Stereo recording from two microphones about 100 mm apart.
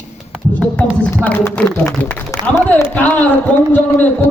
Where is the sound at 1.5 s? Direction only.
10° left (ahead or behind).